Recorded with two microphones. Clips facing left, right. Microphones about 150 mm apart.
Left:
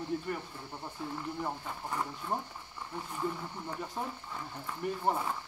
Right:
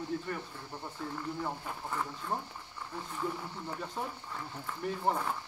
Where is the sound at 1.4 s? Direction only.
10° left (ahead or behind).